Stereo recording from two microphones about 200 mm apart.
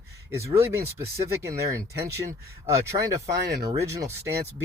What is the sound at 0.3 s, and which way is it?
Speech, 15° right (ahead or behind).